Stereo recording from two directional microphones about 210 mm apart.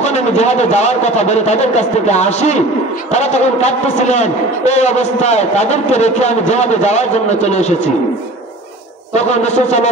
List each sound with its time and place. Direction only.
0.0 s a man's voice: 30° left (ahead or behind)
9.1 s a man's voice: 35° left (ahead or behind)